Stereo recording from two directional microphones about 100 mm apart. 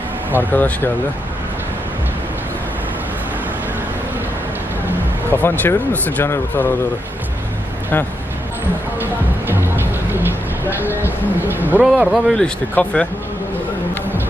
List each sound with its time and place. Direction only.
0.5 s speech: 15° left (ahead or behind)
5.3 s speech: 20° left (ahead or behind)
9.5 s music: 20° right (ahead or behind)
11.0 s speech: 20° right (ahead or behind)
11.8 s speech: 5° right (ahead or behind)
12.7 s speech: 10° left (ahead or behind)